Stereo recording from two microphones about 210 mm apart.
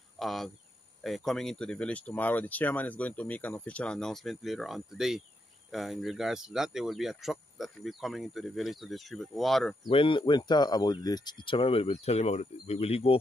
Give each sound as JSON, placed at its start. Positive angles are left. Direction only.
{"t": 0.2, "sound": "speech", "side_deg": 0}
{"t": 9.8, "sound": "speech", "side_deg": 25}